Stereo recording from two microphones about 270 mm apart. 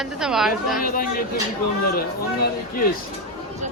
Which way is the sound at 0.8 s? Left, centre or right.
Left.